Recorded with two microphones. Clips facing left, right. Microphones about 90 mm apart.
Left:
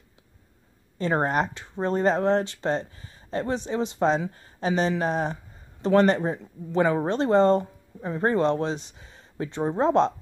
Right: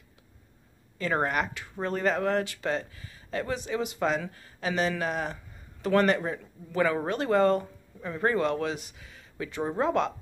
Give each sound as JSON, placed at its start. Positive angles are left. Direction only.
{"t": 0.9, "sound": "speech", "side_deg": 30}